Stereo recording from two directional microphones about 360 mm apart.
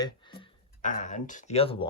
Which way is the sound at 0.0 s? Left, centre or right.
Centre.